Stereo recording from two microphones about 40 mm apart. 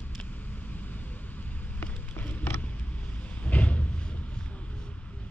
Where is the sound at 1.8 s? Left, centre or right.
Left.